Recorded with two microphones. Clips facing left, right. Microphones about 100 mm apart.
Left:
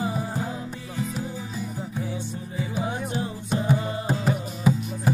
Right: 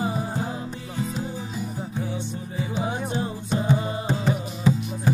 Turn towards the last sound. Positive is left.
turn(degrees=10)  # may be behind; listen again after turning